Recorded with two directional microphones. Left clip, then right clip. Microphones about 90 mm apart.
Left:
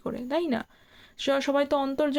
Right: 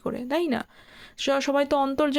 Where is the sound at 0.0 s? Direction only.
30° right (ahead or behind).